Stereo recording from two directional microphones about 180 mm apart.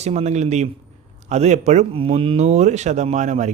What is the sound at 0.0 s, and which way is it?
Speech, 35° right (ahead or behind).